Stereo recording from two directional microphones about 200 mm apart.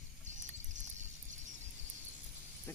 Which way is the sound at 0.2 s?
35° right (ahead or behind).